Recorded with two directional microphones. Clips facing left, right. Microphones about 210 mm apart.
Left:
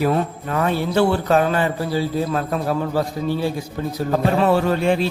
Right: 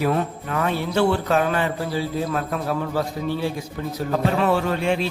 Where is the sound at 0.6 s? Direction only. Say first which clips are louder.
Left 3 dB; 35° left (ahead or behind).